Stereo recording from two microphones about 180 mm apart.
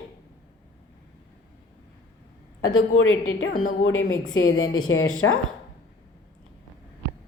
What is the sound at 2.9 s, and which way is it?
Speech, 90° left.